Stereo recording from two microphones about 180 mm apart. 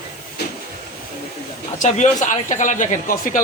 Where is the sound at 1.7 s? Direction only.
45° left (ahead or behind).